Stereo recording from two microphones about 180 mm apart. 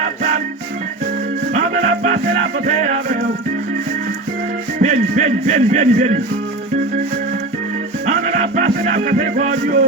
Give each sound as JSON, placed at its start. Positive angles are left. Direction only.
{"t": 0.0, "sound": "organ", "side_deg": -45}
{"t": 1.5, "sound": "music", "side_deg": -45}
{"t": 4.8, "sound": "music", "side_deg": -45}
{"t": 8.0, "sound": "music", "side_deg": -40}